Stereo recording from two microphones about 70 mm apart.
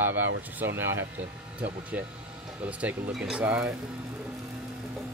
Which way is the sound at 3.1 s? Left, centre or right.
Centre.